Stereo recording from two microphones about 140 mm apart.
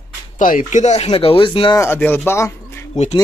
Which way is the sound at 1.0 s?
40° left (ahead or behind).